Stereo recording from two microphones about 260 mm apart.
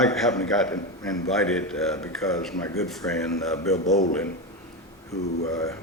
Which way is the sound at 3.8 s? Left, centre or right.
Left.